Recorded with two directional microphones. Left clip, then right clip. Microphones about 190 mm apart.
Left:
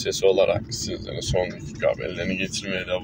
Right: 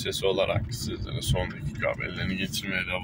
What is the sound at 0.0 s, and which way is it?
Speech, 20° right (ahead or behind).